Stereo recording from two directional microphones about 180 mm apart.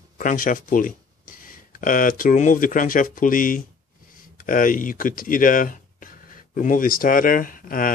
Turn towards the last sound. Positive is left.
turn(degrees=50)  # may be behind; listen again after turning